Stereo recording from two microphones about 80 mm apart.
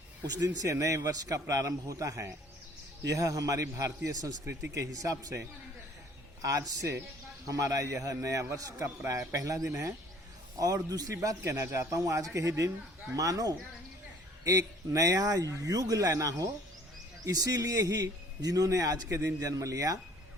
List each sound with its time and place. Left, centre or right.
0.2 s a man's voice: right
9.6 s speech: right
10.6 s a man's voice: right
11.4 s a man's voice: right
14.9 s a man's voice: right